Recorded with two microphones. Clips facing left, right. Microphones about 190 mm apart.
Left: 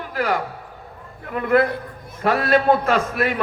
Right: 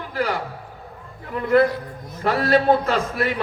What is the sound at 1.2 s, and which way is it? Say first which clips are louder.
Speech: right 1 dB; 55° left (ahead or behind).